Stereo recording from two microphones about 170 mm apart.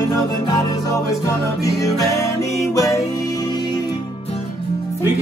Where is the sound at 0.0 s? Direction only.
20° left (ahead or behind).